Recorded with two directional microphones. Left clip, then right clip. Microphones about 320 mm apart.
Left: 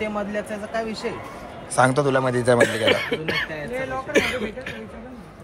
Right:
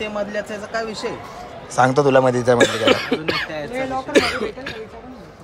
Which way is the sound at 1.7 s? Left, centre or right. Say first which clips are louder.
Right 4 dB; centre.